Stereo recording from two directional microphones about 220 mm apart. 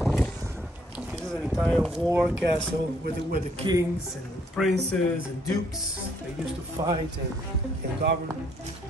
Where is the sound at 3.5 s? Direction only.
20° right (ahead or behind).